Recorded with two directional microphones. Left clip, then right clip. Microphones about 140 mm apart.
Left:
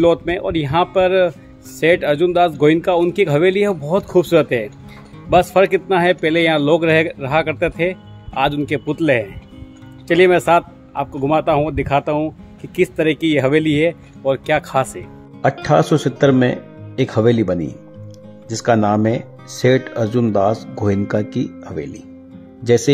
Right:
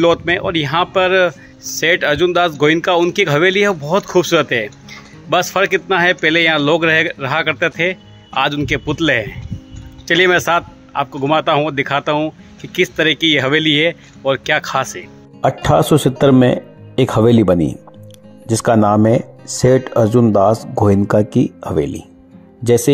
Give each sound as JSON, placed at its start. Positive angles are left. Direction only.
{"t": 0.0, "sound": "a man's voice", "side_deg": 5}
{"t": 15.4, "sound": "speech", "side_deg": -25}